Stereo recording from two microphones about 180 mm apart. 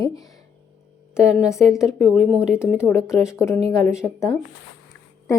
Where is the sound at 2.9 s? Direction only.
15° left (ahead or behind).